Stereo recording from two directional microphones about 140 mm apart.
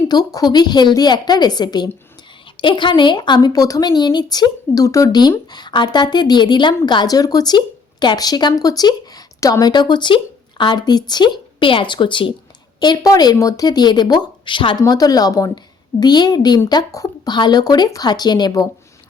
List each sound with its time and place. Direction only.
0.1 s a woman's voice: 25° left (ahead or behind)